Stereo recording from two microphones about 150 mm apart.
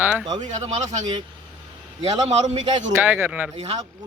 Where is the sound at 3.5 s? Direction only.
45° right (ahead or behind).